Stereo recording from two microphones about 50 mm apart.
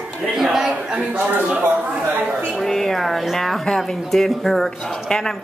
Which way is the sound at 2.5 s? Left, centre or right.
Centre.